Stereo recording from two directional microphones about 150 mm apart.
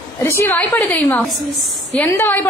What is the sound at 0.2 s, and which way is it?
A woman's voice, 15° left (ahead or behind).